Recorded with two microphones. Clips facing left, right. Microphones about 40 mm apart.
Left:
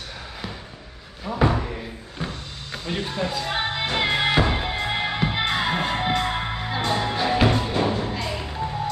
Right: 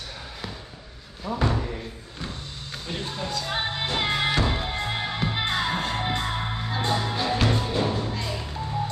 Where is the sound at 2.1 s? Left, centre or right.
Left.